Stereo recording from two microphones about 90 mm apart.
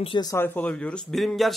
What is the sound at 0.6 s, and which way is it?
Speech, 10° left (ahead or behind).